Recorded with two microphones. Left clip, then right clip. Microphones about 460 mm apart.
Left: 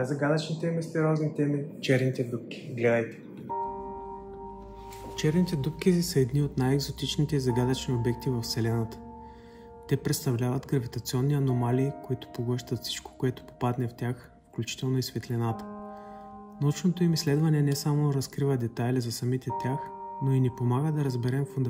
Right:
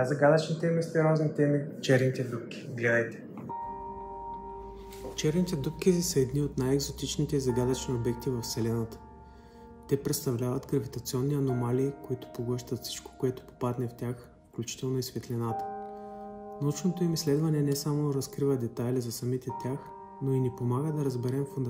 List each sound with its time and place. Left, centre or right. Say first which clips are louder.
0.0 s speech: right 4 dB; centre
5.1 s speech: left 1 dB; centre
9.8 s speech: even; centre